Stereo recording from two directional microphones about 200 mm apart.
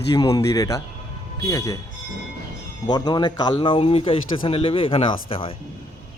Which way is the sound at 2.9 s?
20° left (ahead or behind).